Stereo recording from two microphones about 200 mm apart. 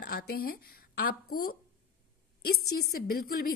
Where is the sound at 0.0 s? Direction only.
50° left (ahead or behind).